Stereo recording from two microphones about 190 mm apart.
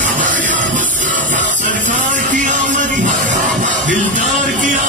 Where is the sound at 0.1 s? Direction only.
40° right (ahead or behind).